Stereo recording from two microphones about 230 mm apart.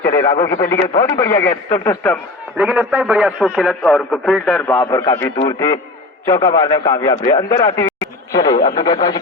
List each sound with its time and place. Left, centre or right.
0.1 s a man's voice: centre
2.6 s a man's voice: centre
7.9 s a sound: centre
8.8 s speech: centre